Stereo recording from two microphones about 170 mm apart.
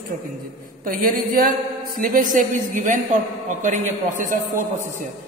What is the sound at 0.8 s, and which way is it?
A woman's voice, 55° right (ahead or behind).